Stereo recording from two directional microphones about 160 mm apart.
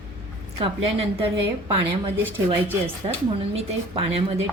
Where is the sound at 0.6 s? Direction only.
40° right (ahead or behind).